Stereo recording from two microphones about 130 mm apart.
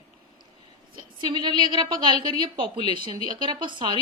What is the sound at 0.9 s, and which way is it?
A woman's voice, 35° right (ahead or behind).